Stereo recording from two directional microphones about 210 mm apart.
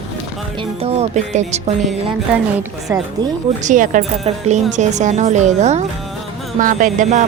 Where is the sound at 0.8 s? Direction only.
30° right (ahead or behind).